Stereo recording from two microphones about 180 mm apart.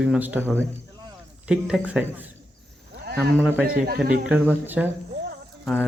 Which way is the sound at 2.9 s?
65° right (ahead or behind).